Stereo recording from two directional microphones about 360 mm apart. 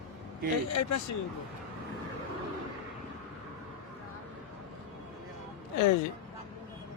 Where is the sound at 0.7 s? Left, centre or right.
Left.